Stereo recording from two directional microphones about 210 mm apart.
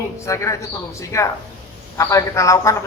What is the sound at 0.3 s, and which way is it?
A man's voice, 15° left (ahead or behind).